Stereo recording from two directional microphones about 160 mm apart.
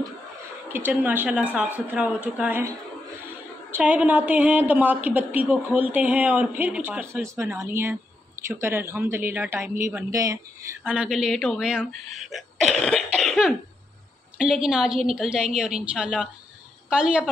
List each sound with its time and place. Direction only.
0.7 s a woman's voice: 10° right (ahead or behind)
3.7 s a woman's voice: 10° right (ahead or behind)
10.8 s a woman's voice: 5° right (ahead or behind)